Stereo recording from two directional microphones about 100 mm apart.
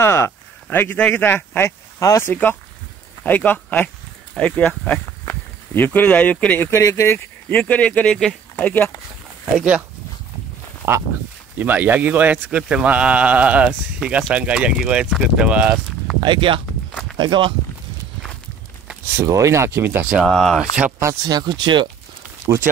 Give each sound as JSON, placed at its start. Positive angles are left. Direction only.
{"t": 0.0, "sound": "speech", "side_deg": 25}
{"t": 2.0, "sound": "speech", "side_deg": 35}
{"t": 2.2, "sound": "speech", "side_deg": 20}
{"t": 6.7, "sound": "speech", "side_deg": 30}
{"t": 7.4, "sound": "speech", "side_deg": 15}
{"t": 9.6, "sound": "speech", "side_deg": -10}
{"t": 10.8, "sound": "speech", "side_deg": -20}
{"t": 16.2, "sound": "speech", "side_deg": -55}
{"t": 19.1, "sound": "speech", "side_deg": -30}
{"t": 20.2, "sound": "speech", "side_deg": 5}
{"t": 21.3, "sound": "speech", "side_deg": -45}